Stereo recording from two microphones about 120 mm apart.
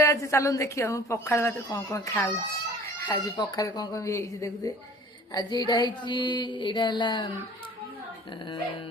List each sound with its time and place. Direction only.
0.0 s a woman's voice: 25° left (ahead or behind)
3.1 s a woman's voice: 30° left (ahead or behind)
5.3 s a sound: 35° left (ahead or behind)